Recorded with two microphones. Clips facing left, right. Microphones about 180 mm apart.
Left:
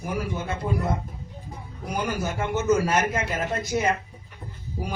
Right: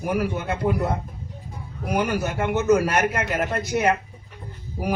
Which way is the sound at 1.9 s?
65° right (ahead or behind).